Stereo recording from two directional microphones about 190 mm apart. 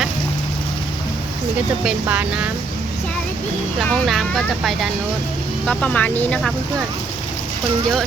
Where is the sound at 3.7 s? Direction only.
Centre (ahead or behind).